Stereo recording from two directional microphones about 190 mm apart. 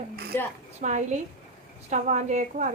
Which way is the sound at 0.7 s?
40° right (ahead or behind).